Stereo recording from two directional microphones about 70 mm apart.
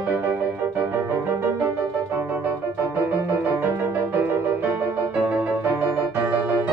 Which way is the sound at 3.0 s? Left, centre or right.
Right.